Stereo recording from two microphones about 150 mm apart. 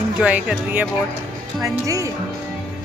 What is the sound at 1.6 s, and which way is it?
Speech, 20° right (ahead or behind).